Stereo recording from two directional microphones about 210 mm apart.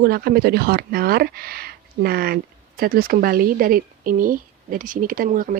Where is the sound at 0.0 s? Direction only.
50° right (ahead or behind).